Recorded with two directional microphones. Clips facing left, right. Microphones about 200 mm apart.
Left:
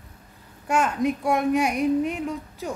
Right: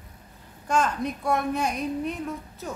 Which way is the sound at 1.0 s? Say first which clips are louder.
Left 4 dB; 15° left (ahead or behind).